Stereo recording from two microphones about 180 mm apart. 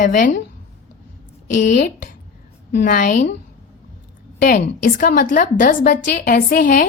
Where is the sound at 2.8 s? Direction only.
50° left (ahead or behind).